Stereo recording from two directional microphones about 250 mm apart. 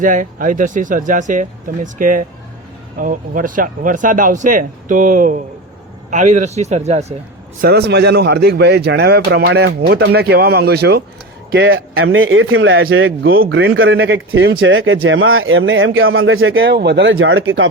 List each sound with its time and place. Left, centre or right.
0.0 s speech: right
7.6 s speech: right